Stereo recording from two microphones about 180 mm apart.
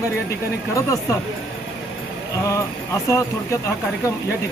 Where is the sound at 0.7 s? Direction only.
15° left (ahead or behind).